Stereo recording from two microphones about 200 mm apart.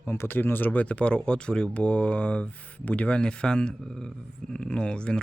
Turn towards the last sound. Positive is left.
turn(degrees=5)  # may be behind; listen again after turning